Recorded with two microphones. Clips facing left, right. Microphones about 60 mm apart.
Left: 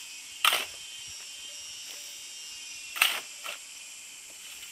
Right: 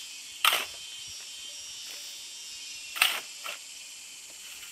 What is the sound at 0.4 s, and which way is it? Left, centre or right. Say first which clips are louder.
Camera: even; centre.